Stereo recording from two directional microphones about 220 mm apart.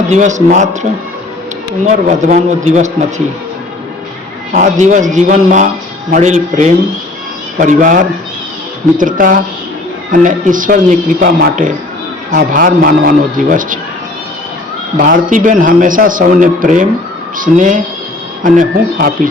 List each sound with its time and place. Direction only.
0.1 s a man's voice: 35° right (ahead or behind)
4.5 s a man's voice: 35° right (ahead or behind)
14.9 s a man's voice: 40° right (ahead or behind)